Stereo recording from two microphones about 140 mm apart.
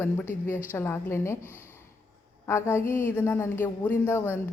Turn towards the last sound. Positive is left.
turn(degrees=20)  # may be behind; listen again after turning